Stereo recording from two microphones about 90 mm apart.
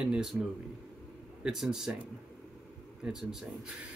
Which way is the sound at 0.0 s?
10° right (ahead or behind).